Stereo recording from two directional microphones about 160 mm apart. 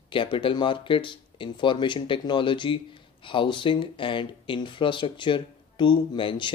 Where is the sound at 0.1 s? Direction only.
30° left (ahead or behind).